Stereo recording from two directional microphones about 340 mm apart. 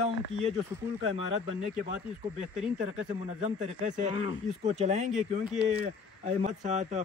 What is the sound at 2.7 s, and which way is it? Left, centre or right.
Speech, centre.